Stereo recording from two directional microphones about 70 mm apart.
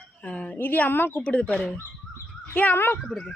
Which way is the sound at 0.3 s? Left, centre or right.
Centre.